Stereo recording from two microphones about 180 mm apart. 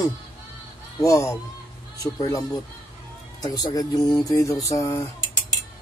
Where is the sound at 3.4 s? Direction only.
20° left (ahead or behind).